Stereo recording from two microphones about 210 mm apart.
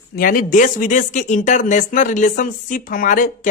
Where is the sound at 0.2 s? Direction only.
40° left (ahead or behind).